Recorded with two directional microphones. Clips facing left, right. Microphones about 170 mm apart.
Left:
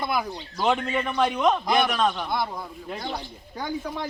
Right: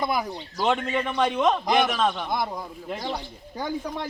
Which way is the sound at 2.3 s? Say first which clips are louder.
Even; 15° right (ahead or behind).